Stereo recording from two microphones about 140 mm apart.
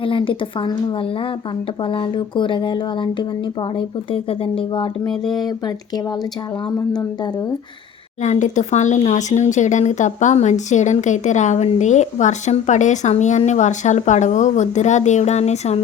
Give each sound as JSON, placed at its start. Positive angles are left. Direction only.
{"t": 0.0, "sound": "speech", "side_deg": 40}
{"t": 5.0, "sound": "speech", "side_deg": 0}
{"t": 5.5, "sound": "speech", "side_deg": 30}
{"t": 8.2, "sound": "speech", "side_deg": 60}